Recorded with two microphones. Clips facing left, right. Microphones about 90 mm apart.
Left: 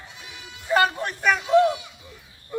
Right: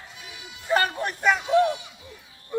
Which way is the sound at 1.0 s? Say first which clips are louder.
Even; 15° right (ahead or behind).